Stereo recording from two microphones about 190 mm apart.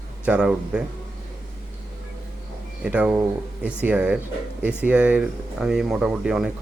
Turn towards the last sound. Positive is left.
turn(degrees=-5)  # may be behind; listen again after turning